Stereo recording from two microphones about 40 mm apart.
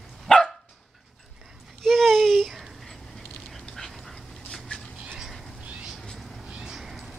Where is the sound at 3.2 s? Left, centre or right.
Centre.